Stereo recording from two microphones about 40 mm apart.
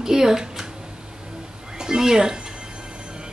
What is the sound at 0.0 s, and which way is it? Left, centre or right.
Speech, centre.